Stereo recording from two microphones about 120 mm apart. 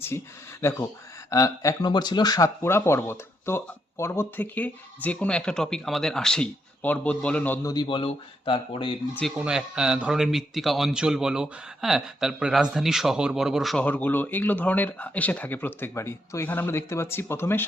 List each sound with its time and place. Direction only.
0.6 s speech: 25° left (ahead or behind)
7.6 s a man's voice: 35° left (ahead or behind)
7.9 s speech: 45° left (ahead or behind)
9.4 s a man's voice: 5° right (ahead or behind)
13.8 s speech: 15° left (ahead or behind)